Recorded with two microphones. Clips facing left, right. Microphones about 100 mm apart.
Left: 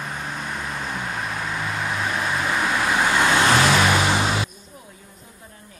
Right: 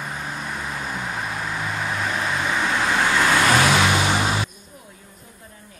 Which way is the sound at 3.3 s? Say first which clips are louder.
Even; 35° left (ahead or behind).